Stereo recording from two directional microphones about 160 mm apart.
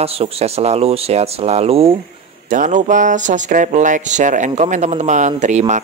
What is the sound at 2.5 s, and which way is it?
Speech, 50° right (ahead or behind).